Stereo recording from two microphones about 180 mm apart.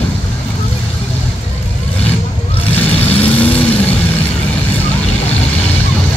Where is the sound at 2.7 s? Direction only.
10° left (ahead or behind).